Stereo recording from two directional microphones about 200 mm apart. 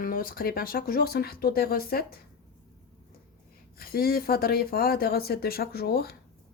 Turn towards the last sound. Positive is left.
turn(degrees=50)  # may be behind; listen again after turning